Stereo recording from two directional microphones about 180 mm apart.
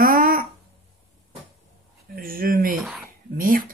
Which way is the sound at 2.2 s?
50° right (ahead or behind).